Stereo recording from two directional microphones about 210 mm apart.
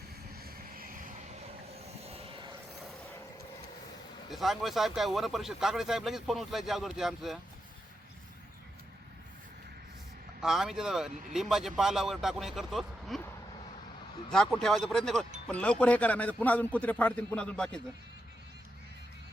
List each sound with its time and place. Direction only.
0.3 s vehicle: 45° right (ahead or behind)
2.0 s vehicle: 30° right (ahead or behind)
4.3 s speech: centre (ahead or behind)
10.4 s speech: centre (ahead or behind)
14.3 s a man's voice: 5° left (ahead or behind)